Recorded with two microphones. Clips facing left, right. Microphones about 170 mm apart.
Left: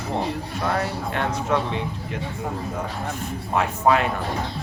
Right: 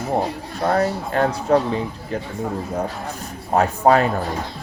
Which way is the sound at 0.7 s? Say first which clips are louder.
Right 7 dB; 40° right (ahead or behind).